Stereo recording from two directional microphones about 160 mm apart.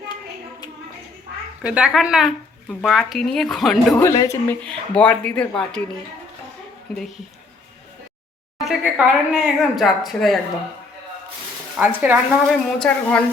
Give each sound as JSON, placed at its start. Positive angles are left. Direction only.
{"t": 1.6, "sound": "a woman's voice", "side_deg": -5}
{"t": 4.1, "sound": "speech", "side_deg": 25}
{"t": 4.4, "sound": "speech", "side_deg": 5}
{"t": 8.6, "sound": "a woman's voice", "side_deg": -5}
{"t": 11.8, "sound": "speech", "side_deg": -10}
{"t": 12.5, "sound": "a woman's voice", "side_deg": 5}